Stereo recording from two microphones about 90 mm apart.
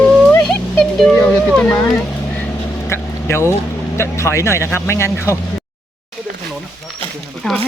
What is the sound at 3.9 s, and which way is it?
Speech, 30° left (ahead or behind).